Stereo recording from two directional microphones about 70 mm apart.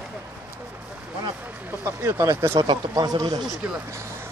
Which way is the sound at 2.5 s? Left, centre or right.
Right.